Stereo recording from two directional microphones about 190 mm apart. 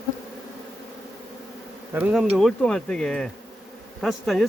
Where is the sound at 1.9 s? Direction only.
10° right (ahead or behind).